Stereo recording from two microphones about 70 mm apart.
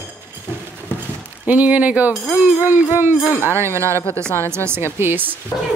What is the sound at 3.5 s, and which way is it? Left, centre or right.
Speech, right.